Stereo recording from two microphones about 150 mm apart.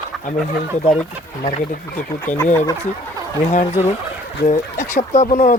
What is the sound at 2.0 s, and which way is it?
Speech, 15° left (ahead or behind).